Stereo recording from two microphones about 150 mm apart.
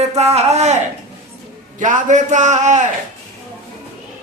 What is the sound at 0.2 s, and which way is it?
Speech, 45° right (ahead or behind).